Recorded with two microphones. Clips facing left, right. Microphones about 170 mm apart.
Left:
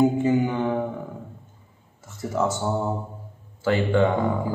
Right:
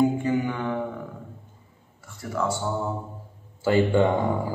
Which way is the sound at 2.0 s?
20° left (ahead or behind).